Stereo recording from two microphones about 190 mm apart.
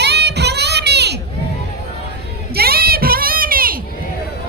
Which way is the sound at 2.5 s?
55° right (ahead or behind).